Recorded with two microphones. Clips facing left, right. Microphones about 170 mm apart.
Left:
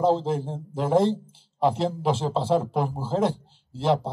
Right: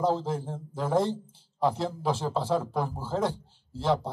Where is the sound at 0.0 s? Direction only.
25° left (ahead or behind).